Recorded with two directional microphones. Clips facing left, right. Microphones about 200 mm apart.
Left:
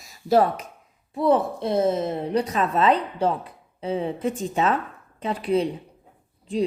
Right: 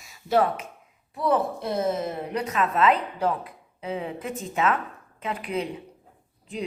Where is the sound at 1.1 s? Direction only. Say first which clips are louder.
Left 4 dB; 25° left (ahead or behind).